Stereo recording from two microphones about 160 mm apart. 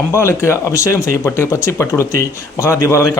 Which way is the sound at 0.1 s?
15° left (ahead or behind).